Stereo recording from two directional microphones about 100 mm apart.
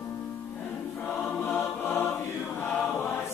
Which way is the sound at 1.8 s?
25° left (ahead or behind).